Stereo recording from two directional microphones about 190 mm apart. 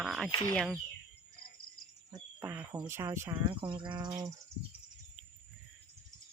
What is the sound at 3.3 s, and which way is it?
Speech, 25° right (ahead or behind).